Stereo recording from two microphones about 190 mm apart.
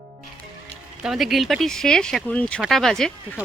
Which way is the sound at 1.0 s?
Centre (ahead or behind).